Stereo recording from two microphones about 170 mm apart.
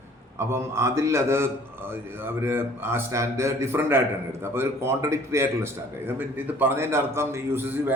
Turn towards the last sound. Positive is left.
turn(degrees=-10)  # may be behind; listen again after turning